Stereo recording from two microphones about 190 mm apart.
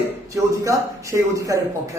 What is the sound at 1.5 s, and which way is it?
Speech, 15° right (ahead or behind).